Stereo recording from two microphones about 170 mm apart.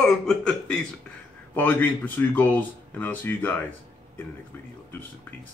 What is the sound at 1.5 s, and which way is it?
Speech, 10° left (ahead or behind).